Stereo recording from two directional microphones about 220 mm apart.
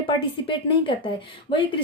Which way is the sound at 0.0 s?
20° left (ahead or behind).